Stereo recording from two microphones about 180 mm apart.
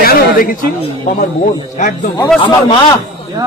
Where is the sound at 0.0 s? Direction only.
55° left (ahead or behind).